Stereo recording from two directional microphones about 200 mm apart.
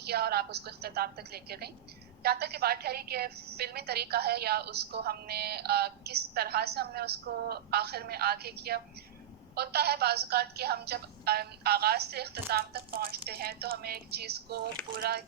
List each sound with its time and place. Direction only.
0.0 s a woman's voice: 50° right (ahead or behind)